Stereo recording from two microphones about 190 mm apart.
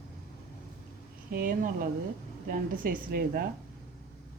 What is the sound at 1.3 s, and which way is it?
Speech, 50° right (ahead or behind).